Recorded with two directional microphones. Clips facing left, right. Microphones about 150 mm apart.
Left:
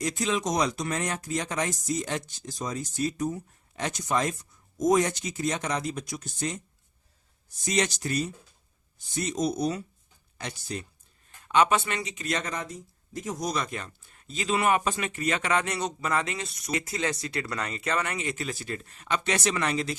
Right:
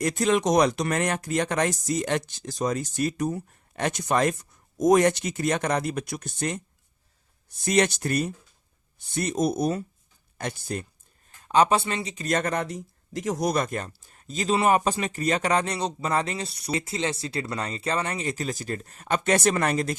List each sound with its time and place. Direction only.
0.0 s speech: 55° right (ahead or behind)
7.6 s speech: 60° right (ahead or behind)
11.4 s speech: 35° right (ahead or behind)